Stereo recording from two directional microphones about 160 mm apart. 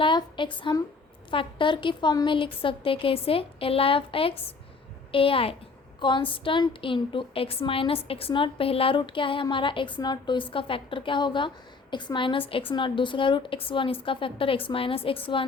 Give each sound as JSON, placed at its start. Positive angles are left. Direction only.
{"t": 0.0, "sound": "a woman's voice", "side_deg": 30}